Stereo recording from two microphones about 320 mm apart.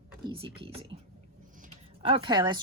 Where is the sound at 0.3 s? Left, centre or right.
Centre.